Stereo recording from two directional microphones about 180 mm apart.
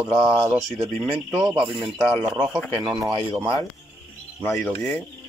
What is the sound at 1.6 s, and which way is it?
Speech, 30° right (ahead or behind).